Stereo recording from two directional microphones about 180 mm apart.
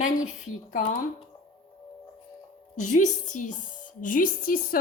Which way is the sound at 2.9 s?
45° left (ahead or behind).